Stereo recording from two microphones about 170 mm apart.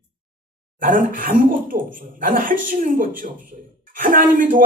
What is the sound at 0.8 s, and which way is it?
Speech, 55° right (ahead or behind).